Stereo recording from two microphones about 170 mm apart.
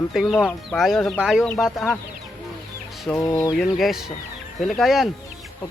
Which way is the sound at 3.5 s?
Centre (ahead or behind).